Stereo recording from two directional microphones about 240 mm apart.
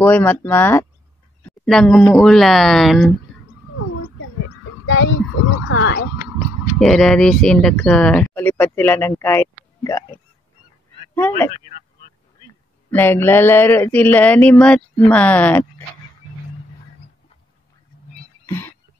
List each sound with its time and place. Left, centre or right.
0.0 s speech: centre
4.8 s speech: left
6.8 s speech: centre
12.9 s speech: centre